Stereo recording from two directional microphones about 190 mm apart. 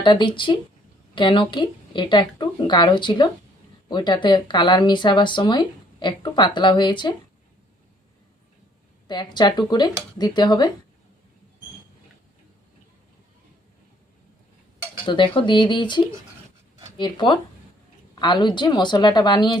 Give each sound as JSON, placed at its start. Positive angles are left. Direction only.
{"t": 0.0, "sound": "speech", "side_deg": 25}
{"t": 9.0, "sound": "speech", "side_deg": 20}
{"t": 15.0, "sound": "speech", "side_deg": 25}